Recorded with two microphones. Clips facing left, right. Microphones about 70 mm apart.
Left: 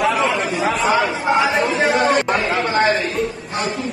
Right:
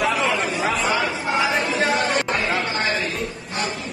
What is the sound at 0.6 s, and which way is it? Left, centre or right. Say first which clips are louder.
Chatter: left 4 dB; left.